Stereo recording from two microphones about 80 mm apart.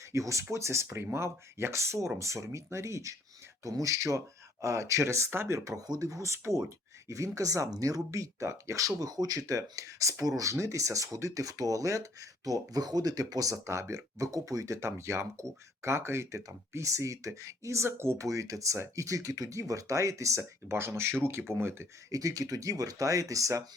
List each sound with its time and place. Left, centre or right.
0.1 s speech: right
9.0 s speech: right
22.1 s speech: right